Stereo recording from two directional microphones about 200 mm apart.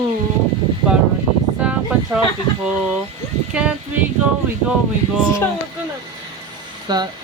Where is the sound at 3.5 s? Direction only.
5° right (ahead or behind).